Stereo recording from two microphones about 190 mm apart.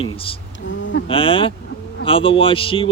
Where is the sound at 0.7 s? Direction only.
75° left (ahead or behind).